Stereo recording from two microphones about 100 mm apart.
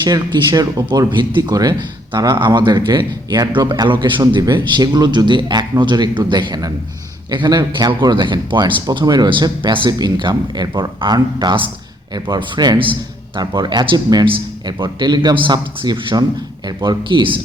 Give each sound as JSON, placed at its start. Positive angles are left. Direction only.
{"t": 0.0, "sound": "speech", "side_deg": -40}
{"t": 0.9, "sound": "speech", "side_deg": -50}
{"t": 3.7, "sound": "speech", "side_deg": -50}
{"t": 13.4, "sound": "speech", "side_deg": -45}